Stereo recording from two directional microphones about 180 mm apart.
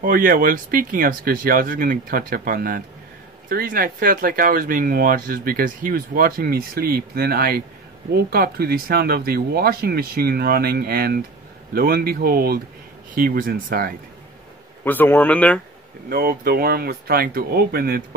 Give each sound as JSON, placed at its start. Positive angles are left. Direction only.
{"t": 0.0, "sound": "speech", "side_deg": -50}
{"t": 14.9, "sound": "speech", "side_deg": 10}
{"t": 16.1, "sound": "speech", "side_deg": -60}